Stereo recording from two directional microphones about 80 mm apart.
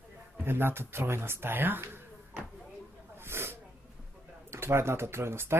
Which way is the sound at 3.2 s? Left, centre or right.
Right.